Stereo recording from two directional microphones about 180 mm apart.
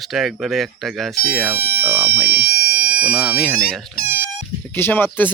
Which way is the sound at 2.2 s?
60° right (ahead or behind).